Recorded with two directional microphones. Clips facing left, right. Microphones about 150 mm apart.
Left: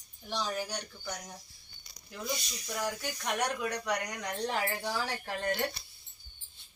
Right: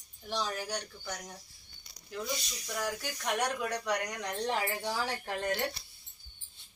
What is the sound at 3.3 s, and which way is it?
Speech, 5° right (ahead or behind).